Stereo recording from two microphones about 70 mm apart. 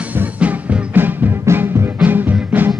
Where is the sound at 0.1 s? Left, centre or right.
Right.